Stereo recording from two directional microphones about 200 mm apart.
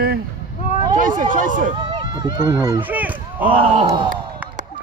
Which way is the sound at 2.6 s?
15° right (ahead or behind).